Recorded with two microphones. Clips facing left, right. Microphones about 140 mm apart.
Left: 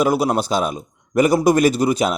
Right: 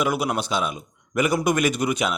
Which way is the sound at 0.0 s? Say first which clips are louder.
Left 6 dB; 35° left (ahead or behind).